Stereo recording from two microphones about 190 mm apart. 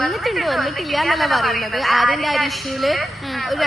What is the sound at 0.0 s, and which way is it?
A woman's voice, centre (ahead or behind).